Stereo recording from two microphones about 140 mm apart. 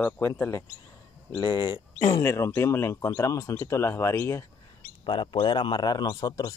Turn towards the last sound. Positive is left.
turn(degrees=30)  # may be behind; listen again after turning